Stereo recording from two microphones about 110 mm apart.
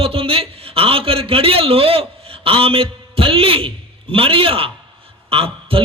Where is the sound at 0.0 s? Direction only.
60° right (ahead or behind).